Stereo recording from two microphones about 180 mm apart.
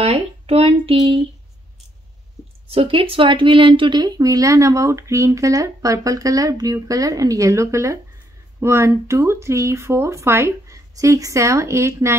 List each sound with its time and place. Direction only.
0.0 s speech: 35° right (ahead or behind)
2.7 s speech: 30° right (ahead or behind); by 12.2 s 15° right (ahead or behind)